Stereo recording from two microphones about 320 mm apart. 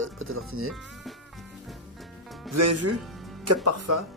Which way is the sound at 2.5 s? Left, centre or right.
Right.